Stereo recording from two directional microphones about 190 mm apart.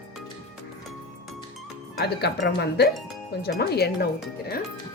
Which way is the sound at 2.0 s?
60° left (ahead or behind).